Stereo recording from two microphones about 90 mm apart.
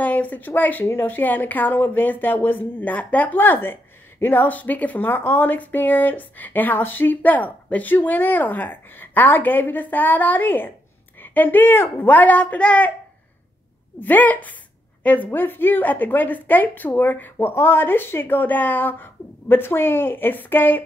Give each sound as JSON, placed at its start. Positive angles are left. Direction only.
{"t": 0.0, "sound": "speech", "side_deg": 20}
{"t": 13.9, "sound": "speech", "side_deg": 20}